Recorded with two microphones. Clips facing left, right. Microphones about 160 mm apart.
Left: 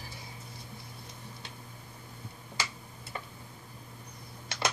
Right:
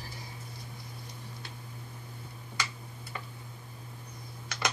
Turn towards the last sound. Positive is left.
turn(degrees=25)  # may be behind; listen again after turning